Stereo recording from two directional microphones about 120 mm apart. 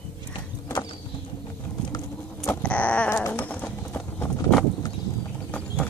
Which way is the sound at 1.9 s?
20° left (ahead or behind).